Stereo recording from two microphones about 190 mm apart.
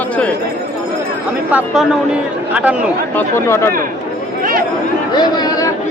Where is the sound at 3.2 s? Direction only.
15° left (ahead or behind).